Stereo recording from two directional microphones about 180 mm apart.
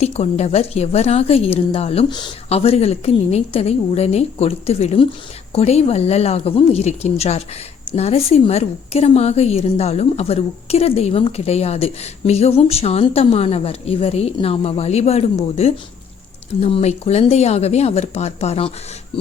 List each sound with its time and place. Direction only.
0.0 s a woman's voice: 35° left (ahead or behind)
19.1 s filing: 30° left (ahead or behind)